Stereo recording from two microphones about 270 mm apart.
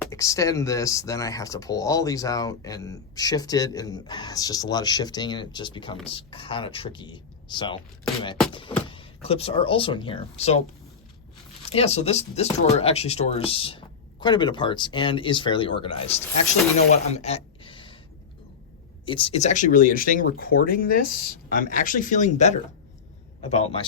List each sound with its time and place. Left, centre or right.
0.0 s speech: centre
11.7 s speech: left
19.0 s speech: centre